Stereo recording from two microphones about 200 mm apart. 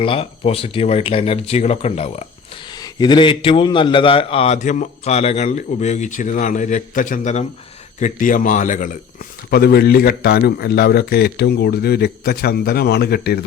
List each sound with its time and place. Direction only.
0.0 s speech: 30° left (ahead or behind)
2.6 s a man's voice: 20° left (ahead or behind); by 9.0 s 40° left (ahead or behind)
9.5 s a man's voice: 50° left (ahead or behind)